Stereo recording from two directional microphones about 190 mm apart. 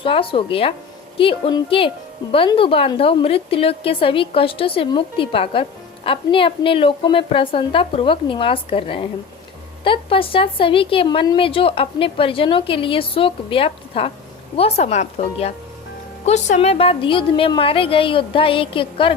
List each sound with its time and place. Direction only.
0.0 s a woman's voice: 30° left (ahead or behind)